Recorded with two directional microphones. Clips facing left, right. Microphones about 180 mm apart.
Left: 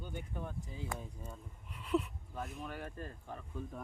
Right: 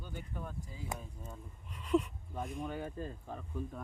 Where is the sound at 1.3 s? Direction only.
10° left (ahead or behind).